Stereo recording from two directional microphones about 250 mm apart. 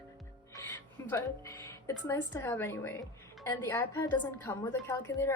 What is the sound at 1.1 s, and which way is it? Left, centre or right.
Speech, centre.